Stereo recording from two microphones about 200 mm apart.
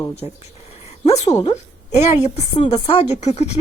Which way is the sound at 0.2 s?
30° left (ahead or behind).